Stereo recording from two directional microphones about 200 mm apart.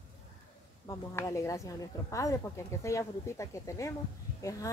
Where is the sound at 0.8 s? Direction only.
15° left (ahead or behind).